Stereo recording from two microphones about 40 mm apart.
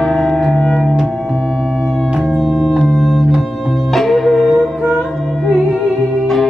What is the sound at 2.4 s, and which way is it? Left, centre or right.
Organ, centre.